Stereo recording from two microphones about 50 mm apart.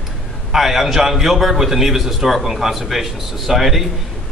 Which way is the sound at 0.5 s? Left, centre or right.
Centre.